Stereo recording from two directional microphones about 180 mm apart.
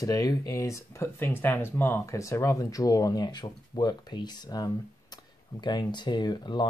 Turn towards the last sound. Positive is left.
turn(degrees=25)  # may be behind; listen again after turning